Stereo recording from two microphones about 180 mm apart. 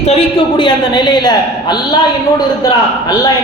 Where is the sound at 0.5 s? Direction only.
25° left (ahead or behind).